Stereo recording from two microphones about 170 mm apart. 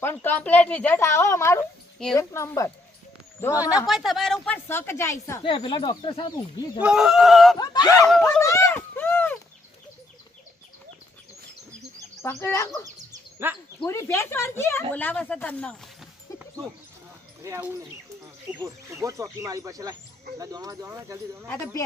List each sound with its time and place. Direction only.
0.0 s speech: 15° left (ahead or behind)
3.8 s speech: centre (ahead or behind); by 5.1 s 15° left (ahead or behind)
5.5 s speech: 30° left (ahead or behind)
6.8 s speech: centre (ahead or behind)
7.6 s speech: 25° left (ahead or behind)
8.0 s speech: 5° left (ahead or behind)
8.4 s a sound: 15° left (ahead or behind)
12.2 s speech: 15° left (ahead or behind)
13.4 s speech: 15° right (ahead or behind)
13.8 s speech: 15° left (ahead or behind)
17.4 s speech: 15° right (ahead or behind)
21.4 s speech: 15° left (ahead or behind)